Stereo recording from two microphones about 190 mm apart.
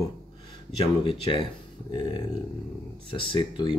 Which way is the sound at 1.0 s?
30° left (ahead or behind).